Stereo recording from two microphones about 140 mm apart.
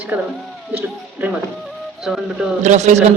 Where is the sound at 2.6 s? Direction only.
55° right (ahead or behind).